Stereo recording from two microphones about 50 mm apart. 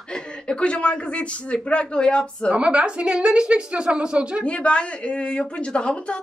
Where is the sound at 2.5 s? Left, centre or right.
Right.